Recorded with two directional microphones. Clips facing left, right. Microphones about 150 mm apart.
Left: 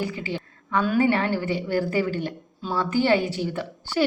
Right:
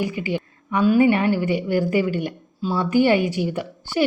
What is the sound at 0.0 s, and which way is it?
A woman's voice, 15° right (ahead or behind).